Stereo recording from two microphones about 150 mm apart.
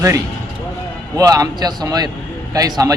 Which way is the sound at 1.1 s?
20° right (ahead or behind).